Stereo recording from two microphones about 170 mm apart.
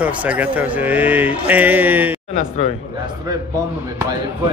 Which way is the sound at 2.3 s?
40° left (ahead or behind).